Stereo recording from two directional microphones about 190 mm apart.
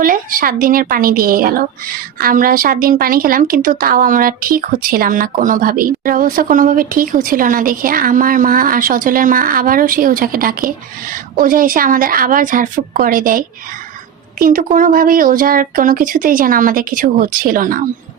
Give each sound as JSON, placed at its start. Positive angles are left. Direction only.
{"t": 0.0, "sound": "a woman's voice", "side_deg": -45}